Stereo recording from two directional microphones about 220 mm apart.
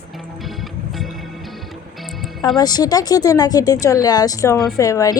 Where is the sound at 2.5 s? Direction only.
20° left (ahead or behind).